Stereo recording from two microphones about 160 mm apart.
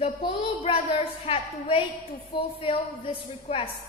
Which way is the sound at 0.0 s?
35° left (ahead or behind).